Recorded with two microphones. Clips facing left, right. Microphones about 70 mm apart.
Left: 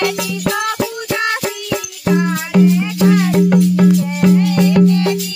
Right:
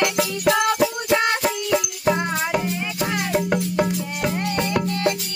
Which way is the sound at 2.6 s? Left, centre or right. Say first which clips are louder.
Left 12 dB; centre.